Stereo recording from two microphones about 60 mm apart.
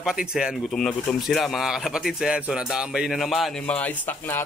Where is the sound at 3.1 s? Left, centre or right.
Centre.